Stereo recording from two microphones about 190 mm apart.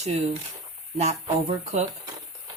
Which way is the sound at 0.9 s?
35° right (ahead or behind).